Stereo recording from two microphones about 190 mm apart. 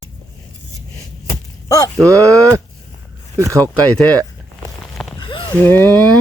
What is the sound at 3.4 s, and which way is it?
Speech, 15° right (ahead or behind).